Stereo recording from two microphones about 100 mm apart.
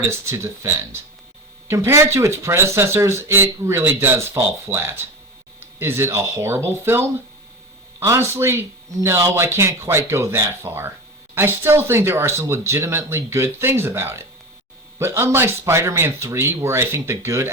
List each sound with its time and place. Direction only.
0.0 s speech: 25° right (ahead or behind)